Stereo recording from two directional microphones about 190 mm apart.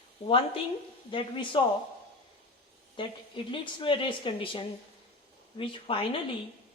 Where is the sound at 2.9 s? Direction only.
25° left (ahead or behind).